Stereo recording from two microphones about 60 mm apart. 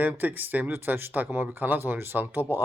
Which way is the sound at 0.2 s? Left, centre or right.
Right.